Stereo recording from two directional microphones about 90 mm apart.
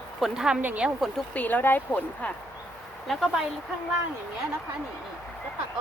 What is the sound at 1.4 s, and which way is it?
Speech, 20° left (ahead or behind).